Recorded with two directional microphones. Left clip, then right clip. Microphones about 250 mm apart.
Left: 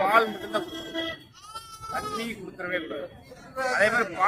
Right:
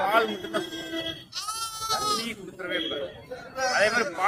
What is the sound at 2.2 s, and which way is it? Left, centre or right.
A man's voice, centre.